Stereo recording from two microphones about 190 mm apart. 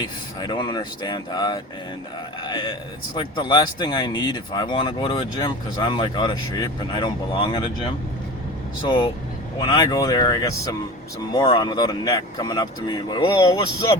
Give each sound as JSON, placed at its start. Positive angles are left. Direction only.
{"t": 0.0, "sound": "speech", "side_deg": 20}
{"t": 9.6, "sound": "speech", "side_deg": 20}